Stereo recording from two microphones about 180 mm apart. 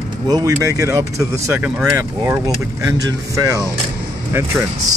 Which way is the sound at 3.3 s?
20° right (ahead or behind).